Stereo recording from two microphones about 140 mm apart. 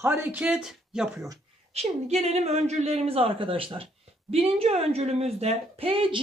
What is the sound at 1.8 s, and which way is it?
A woman's voice, 45° right (ahead or behind).